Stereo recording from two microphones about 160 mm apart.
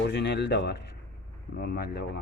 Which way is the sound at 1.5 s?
75° left (ahead or behind).